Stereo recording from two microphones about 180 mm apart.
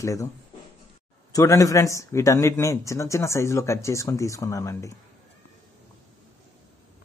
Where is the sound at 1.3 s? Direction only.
20° left (ahead or behind).